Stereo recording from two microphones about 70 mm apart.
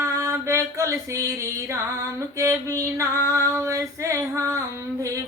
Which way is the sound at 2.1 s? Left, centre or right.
Right.